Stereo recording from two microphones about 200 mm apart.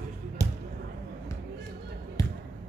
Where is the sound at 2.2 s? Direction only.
15° left (ahead or behind).